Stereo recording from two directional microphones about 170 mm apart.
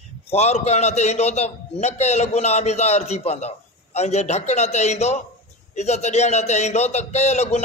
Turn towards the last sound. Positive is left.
turn(degrees=40)  # may be behind; listen again after turning